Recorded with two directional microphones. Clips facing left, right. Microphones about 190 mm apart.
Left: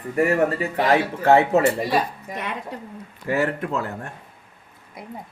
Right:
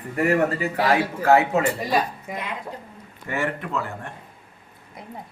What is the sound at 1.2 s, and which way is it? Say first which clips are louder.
Speech: left 2 dB; 30° left (ahead or behind).